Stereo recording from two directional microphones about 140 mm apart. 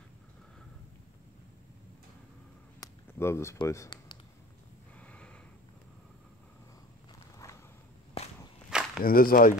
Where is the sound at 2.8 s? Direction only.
20° left (ahead or behind).